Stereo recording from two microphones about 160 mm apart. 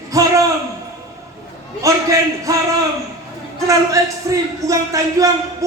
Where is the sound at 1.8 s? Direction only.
20° right (ahead or behind).